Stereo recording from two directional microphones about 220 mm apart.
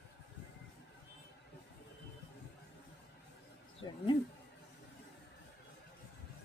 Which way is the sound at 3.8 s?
20° left (ahead or behind).